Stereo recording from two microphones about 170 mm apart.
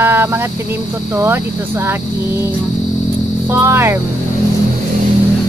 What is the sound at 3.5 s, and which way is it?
Speech, 15° right (ahead or behind).